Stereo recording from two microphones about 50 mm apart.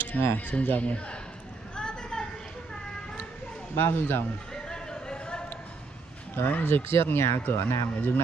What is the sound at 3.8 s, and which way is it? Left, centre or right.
Speech, left.